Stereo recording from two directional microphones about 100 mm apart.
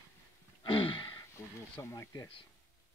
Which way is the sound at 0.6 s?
55° left (ahead or behind).